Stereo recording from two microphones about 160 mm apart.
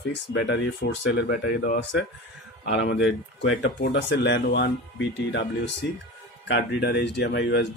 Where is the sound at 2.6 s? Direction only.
90° left.